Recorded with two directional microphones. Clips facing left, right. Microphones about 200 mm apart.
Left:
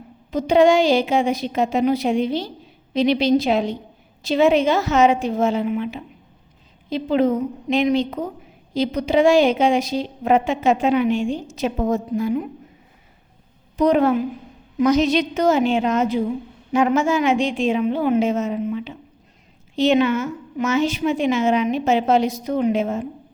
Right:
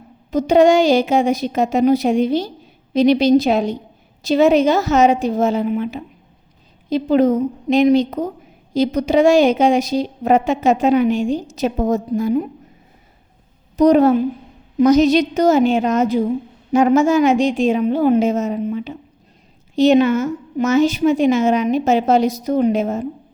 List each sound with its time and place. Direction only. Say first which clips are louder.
0.3 s a woman's voice: right 3 dB; 45° right (ahead or behind)
13.7 s a woman's voice: right 5 dB; 40° right (ahead or behind)